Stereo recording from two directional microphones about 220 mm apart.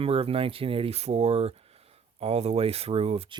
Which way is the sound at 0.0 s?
25° right (ahead or behind).